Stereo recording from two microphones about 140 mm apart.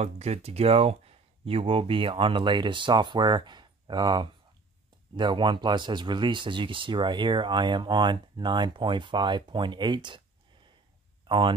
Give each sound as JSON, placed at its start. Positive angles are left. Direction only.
{"t": 0.0, "sound": "speech", "side_deg": -50}
{"t": 11.2, "sound": "speech", "side_deg": -35}